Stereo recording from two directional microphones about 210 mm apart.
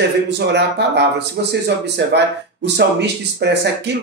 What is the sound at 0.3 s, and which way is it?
Speech, 55° right (ahead or behind).